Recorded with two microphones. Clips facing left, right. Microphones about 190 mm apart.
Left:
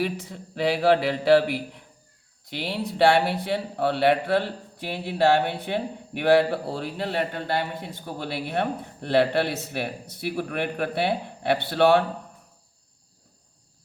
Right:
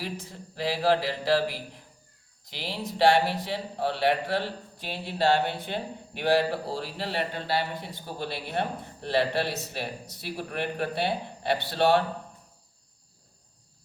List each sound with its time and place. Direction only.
0.0 s a man's voice: 65° left (ahead or behind)